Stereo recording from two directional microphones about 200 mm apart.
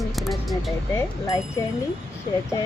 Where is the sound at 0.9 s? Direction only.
15° left (ahead or behind).